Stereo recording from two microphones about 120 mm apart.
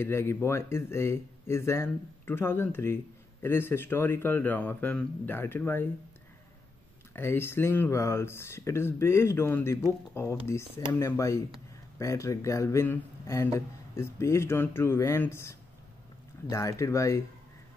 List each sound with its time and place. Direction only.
0.0 s speech: 20° left (ahead or behind)
7.2 s speech: 20° left (ahead or behind)